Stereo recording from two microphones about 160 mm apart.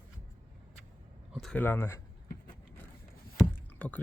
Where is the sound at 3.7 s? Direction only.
10° left (ahead or behind).